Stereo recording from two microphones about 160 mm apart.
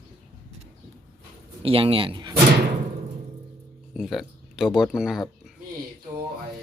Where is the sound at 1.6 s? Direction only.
35° right (ahead or behind).